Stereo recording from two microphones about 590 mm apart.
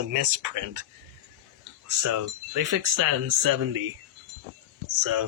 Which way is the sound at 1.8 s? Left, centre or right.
Right.